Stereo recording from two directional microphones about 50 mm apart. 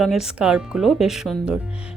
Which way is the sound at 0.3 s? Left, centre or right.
Centre.